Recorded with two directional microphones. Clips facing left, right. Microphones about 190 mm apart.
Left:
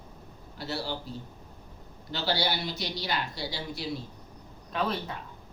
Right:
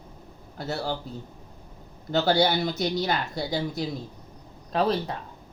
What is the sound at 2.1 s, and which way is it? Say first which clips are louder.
Speech: right 8 dB; 50° right (ahead or behind).